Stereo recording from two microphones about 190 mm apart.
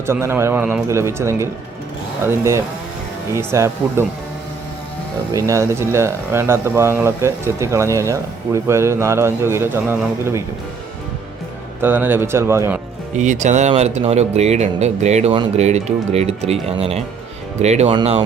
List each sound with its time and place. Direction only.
0.0 s speech: 15° right (ahead or behind)
5.3 s speech: 15° right (ahead or behind)
11.8 s speech: 10° right (ahead or behind)
13.1 s speech: 40° right (ahead or behind)